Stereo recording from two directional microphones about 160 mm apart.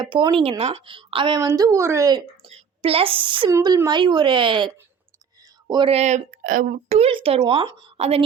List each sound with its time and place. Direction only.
0.0 s speech: 30° right (ahead or behind)
2.5 s a woman's voice: 35° right (ahead or behind)
3.5 s speech: 20° right (ahead or behind)
7.9 s speech: 40° right (ahead or behind)